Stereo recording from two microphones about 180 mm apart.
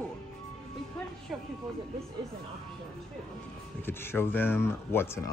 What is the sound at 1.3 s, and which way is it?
Speech, 5° right (ahead or behind).